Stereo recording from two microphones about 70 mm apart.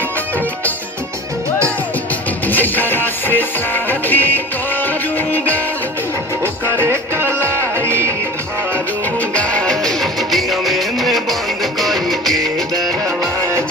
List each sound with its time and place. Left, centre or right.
2.5 s music: left
6.4 s music: right
7.3 s music: left
7.6 s music: right
9.3 s music: centre